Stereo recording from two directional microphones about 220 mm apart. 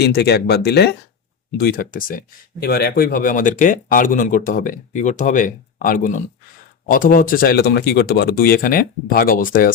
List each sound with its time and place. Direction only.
0.0 s speech: 50° left (ahead or behind)